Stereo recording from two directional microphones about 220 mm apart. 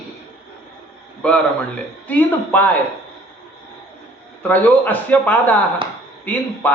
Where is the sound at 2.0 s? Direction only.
5° left (ahead or behind).